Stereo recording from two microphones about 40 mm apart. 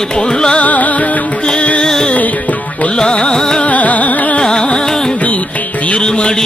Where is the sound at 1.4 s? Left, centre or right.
Left.